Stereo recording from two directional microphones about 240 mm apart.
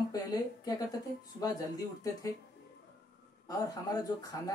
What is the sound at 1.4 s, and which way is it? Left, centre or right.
Speech, centre.